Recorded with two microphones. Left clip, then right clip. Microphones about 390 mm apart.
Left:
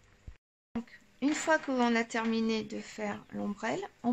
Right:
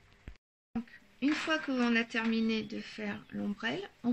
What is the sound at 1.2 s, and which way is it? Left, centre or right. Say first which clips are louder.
Speech: left 3 dB; centre.